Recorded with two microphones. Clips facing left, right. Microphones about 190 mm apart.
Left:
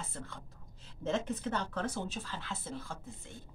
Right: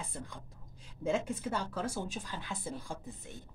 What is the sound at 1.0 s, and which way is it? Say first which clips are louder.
A woman's voice: right 1 dB; 10° right (ahead or behind).